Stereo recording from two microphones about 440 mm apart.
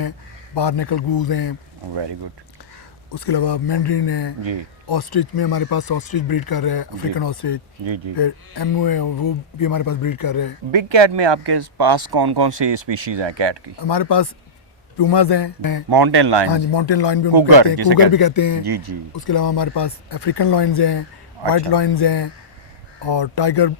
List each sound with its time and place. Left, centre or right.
0.5 s speech: left
3.1 s speech: left
7.9 s speech: right
8.1 s speech: left
10.7 s speech: right
13.7 s speech: left
15.9 s speech: right
16.5 s a man's voice: left
17.3 s speech: right
18.1 s speech: left
18.7 s speech: right
19.1 s a man's voice: left